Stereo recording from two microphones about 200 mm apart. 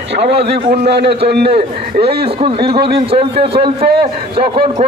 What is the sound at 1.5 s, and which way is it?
A man's voice, 30° right (ahead or behind).